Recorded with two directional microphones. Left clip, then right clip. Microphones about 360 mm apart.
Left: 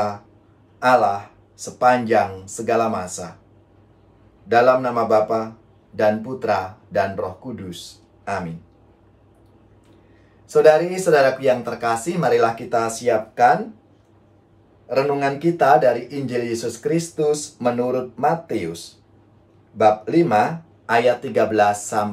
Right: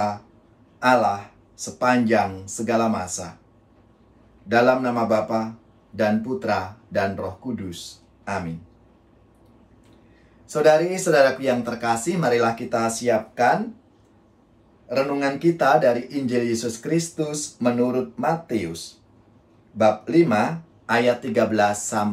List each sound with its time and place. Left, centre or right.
0.7 s speech: centre
4.5 s speech: centre
10.5 s speech: centre
14.9 s speech: centre
19.8 s speech: centre